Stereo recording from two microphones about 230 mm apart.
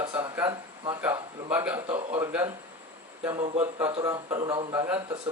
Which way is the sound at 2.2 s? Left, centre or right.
Centre.